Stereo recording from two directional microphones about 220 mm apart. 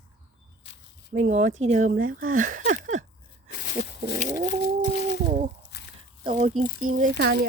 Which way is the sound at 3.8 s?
35° left (ahead or behind).